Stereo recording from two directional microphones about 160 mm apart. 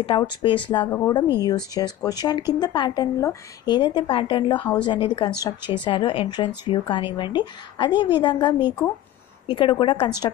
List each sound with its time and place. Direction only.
0.0 s a woman's voice: 30° left (ahead or behind)